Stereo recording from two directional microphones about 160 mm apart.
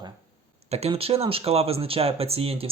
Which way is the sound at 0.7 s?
40° right (ahead or behind).